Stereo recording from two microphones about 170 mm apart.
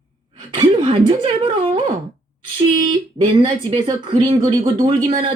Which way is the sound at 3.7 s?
30° right (ahead or behind).